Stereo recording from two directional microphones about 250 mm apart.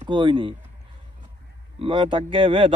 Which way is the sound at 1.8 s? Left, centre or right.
Centre.